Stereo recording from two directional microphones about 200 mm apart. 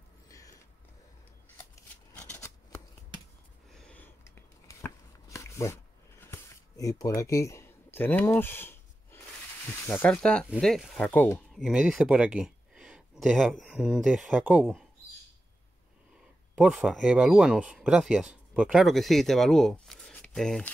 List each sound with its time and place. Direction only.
0.3 s a sound: 15° left (ahead or behind)
2.1 s shuffling cards: 10° left (ahead or behind)
3.7 s a sound: 5° left (ahead or behind)
9.7 s speech: 10° left (ahead or behind)
11.6 s speech: 5° right (ahead or behind)
16.5 s speech: 5° right (ahead or behind)